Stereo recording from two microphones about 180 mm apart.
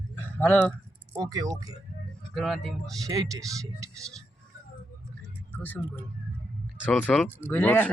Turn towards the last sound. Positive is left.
turn(degrees=10)  # may be behind; listen again after turning